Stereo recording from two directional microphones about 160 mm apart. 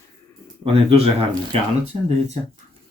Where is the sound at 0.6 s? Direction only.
35° right (ahead or behind).